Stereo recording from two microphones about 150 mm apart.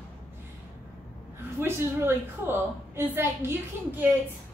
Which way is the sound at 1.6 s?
15° right (ahead or behind).